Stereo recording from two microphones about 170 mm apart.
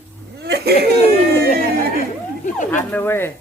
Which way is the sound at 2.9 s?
10° left (ahead or behind).